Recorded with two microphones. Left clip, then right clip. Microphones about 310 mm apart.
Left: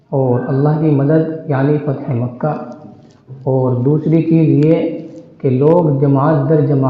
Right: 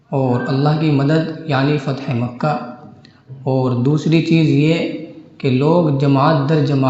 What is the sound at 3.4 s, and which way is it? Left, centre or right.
A man's voice, right.